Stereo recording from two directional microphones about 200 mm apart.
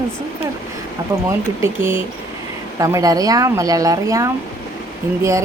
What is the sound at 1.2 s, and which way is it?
Speech, 10° right (ahead or behind).